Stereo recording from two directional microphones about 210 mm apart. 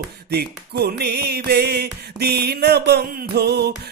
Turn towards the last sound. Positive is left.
turn(degrees=-50)  # may be behind; listen again after turning